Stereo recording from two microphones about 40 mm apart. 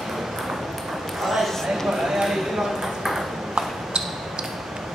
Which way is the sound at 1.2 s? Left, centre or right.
Centre.